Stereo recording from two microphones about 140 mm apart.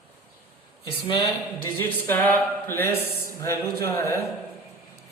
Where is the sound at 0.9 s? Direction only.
35° left (ahead or behind).